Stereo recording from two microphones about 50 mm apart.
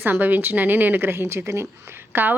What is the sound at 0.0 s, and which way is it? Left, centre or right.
A woman's voice, right.